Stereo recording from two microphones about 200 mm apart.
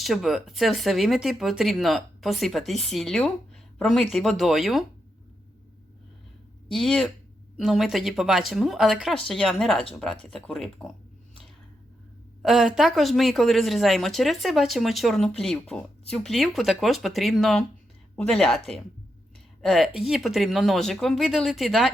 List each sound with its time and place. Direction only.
0.0 s speech: centre (ahead or behind)
6.7 s speech: centre (ahead or behind)
12.4 s speech: centre (ahead or behind)